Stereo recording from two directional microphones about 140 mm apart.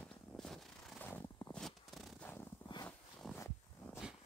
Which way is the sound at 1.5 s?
Centre (ahead or behind).